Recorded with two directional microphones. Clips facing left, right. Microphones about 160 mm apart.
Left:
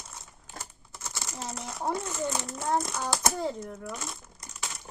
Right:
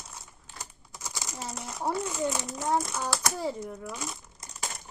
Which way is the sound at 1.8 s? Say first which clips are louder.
Right 2 dB; 10° right (ahead or behind).